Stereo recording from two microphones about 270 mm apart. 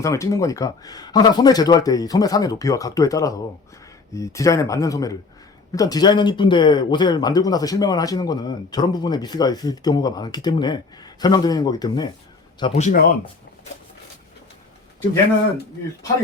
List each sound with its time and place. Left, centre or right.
0.0 s speech: centre